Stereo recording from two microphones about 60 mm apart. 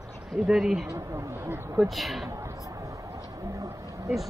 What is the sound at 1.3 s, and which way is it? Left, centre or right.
Speech, right.